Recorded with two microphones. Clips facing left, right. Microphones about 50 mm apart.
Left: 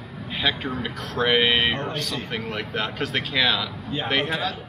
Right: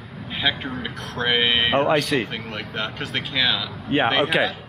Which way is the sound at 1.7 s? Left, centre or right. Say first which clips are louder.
Right 10 dB; right.